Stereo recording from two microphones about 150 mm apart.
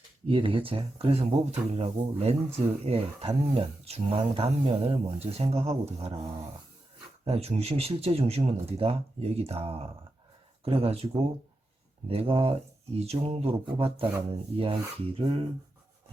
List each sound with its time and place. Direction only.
0.3 s speech: 35° right (ahead or behind)
7.3 s speech: 45° right (ahead or behind)